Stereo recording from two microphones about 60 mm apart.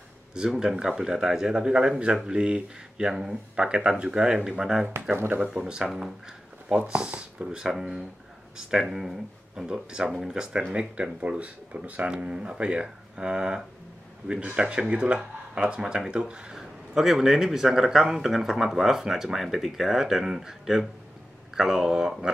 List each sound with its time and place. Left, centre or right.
0.3 s speech: centre
5.1 s speech: right
5.4 s speech: centre
5.9 s speech: centre
6.9 s speech: centre
7.6 s speech: centre
16.9 s speech: centre